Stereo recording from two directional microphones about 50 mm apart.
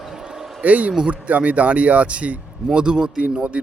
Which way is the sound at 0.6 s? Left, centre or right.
Right.